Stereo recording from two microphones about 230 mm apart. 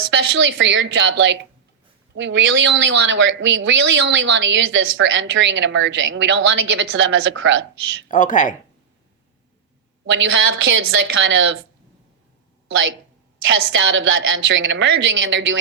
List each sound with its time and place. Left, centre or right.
0.1 s speech: right
8.0 s speech: left
10.1 s a woman's voice: right
13.5 s a woman's voice: right